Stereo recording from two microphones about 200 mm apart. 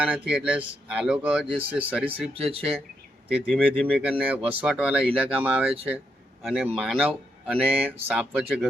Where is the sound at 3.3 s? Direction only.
5° left (ahead or behind).